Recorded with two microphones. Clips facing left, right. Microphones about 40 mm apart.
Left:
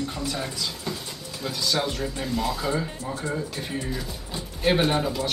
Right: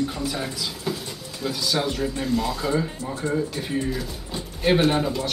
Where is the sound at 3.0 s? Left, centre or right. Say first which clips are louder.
Right 2 dB; right.